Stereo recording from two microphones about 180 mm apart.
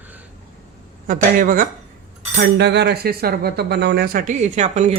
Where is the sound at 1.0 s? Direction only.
50° right (ahead or behind).